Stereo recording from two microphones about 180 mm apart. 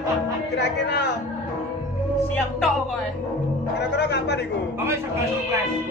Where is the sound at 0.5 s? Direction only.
70° left (ahead or behind).